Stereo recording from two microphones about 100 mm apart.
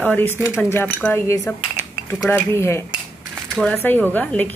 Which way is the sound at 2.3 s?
25° left (ahead or behind).